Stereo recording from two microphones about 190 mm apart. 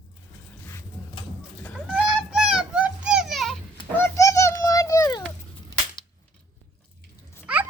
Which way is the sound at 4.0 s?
15° left (ahead or behind).